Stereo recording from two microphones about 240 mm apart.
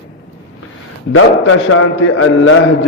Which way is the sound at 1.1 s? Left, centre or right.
Left.